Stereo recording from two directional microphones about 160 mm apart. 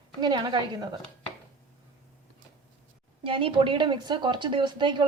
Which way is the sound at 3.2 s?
35° right (ahead or behind).